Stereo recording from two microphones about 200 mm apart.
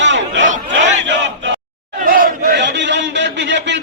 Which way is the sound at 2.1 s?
45° right (ahead or behind).